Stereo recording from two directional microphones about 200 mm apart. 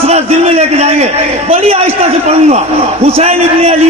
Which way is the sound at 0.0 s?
30° right (ahead or behind).